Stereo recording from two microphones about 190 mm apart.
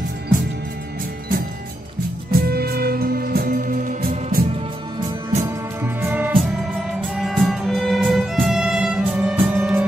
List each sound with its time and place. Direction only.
2.3 s music: 55° right (ahead or behind)
5.8 s music: 10° right (ahead or behind)